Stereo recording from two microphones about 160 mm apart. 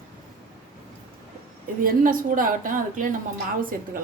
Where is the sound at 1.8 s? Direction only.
60° right (ahead or behind).